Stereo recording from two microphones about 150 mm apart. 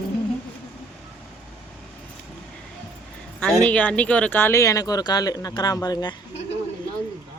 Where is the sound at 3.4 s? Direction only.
5° left (ahead or behind); by 6.1 s 25° left (ahead or behind).